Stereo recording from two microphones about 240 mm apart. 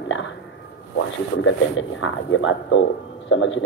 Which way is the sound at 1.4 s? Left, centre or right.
Left.